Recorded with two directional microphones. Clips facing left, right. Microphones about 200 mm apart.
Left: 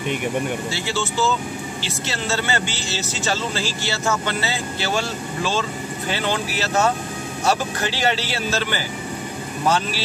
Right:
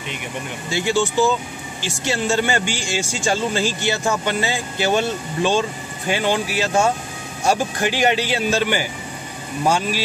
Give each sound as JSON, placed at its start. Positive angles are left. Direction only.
{"t": 0.7, "sound": "speech", "side_deg": -15}